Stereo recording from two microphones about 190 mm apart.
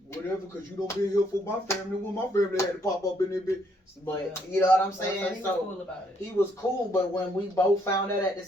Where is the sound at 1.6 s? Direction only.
15° left (ahead or behind).